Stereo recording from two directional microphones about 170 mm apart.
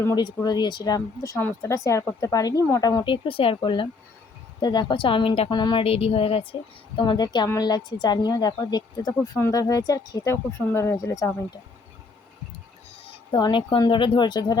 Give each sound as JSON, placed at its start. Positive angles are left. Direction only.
{"t": 0.0, "sound": "a woman's voice", "side_deg": 20}
{"t": 13.3, "sound": "a woman's voice", "side_deg": 25}